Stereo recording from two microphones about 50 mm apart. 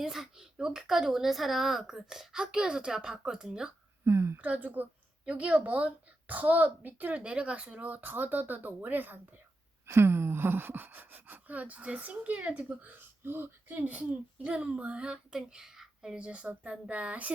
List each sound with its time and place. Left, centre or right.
0.0 s speech: centre
4.0 s speech: right
4.4 s speech: right
5.2 s speech: right
7.2 s speech: right
9.8 s speech: right
14.4 s speech: right
16.1 s speech: right